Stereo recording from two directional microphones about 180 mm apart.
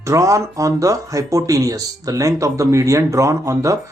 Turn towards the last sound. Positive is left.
turn(degrees=-15)  # may be behind; listen again after turning